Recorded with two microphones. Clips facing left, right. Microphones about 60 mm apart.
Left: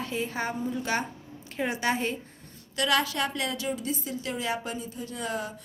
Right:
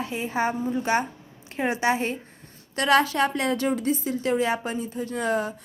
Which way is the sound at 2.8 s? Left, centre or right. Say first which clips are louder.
Right 6 dB; right.